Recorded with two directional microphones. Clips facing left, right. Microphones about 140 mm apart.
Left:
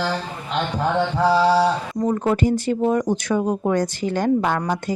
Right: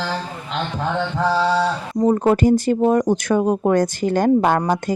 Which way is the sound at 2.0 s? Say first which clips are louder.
Right 5 dB; 35° right (ahead or behind).